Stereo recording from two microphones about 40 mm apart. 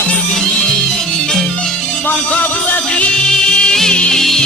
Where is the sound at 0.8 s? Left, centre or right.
Centre.